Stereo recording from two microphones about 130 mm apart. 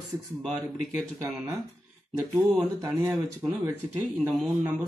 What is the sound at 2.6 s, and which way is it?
Speech, 20° right (ahead or behind).